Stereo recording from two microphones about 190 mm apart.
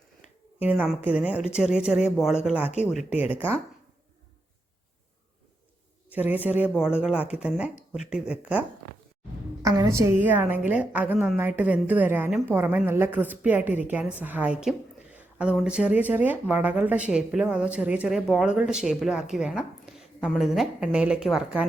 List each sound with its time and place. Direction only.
0.6 s a woman's voice: 10° right (ahead or behind)
6.1 s a woman's voice: 10° right (ahead or behind)
9.6 s a woman's voice: 15° right (ahead or behind)